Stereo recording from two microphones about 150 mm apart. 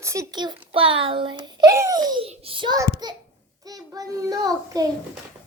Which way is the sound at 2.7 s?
20° right (ahead or behind).